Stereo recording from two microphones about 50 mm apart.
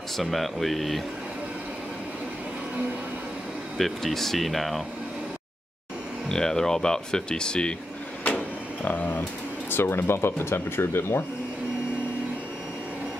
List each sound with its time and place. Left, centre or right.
0.2 s speech: centre
3.7 s speech: centre
6.2 s speech: centre
8.8 s speech: left
9.7 s speech: left